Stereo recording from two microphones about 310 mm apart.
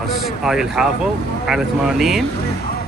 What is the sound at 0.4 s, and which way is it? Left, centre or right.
Speech, centre.